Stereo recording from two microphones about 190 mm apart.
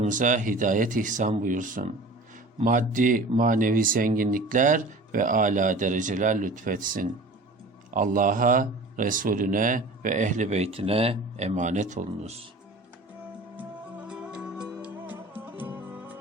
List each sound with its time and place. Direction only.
0.0 s speech: 40° right (ahead or behind)
14.1 s music: 5° right (ahead or behind)